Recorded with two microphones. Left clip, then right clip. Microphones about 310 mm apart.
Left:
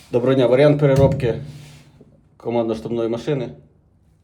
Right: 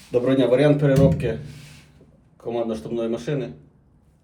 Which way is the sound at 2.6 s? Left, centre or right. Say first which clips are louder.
Left 4 dB; left.